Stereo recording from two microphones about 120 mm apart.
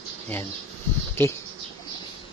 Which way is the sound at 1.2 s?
20° left (ahead or behind).